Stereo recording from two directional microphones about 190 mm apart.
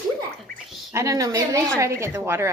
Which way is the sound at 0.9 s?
15° right (ahead or behind).